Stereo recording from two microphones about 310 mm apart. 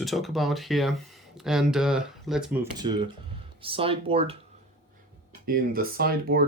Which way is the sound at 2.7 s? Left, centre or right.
Centre.